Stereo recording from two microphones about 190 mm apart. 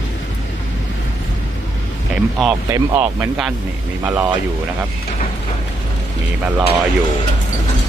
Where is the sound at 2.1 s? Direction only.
5° right (ahead or behind).